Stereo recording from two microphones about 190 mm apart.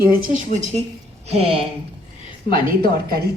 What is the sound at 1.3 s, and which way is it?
Speech, 30° right (ahead or behind).